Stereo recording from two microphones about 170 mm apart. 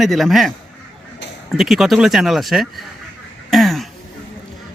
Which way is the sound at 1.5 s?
Centre (ahead or behind).